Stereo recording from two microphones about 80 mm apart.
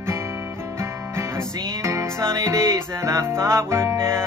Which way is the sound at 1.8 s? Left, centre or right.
Right.